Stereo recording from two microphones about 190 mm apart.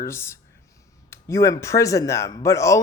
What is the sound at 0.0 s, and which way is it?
Speech, 15° left (ahead or behind).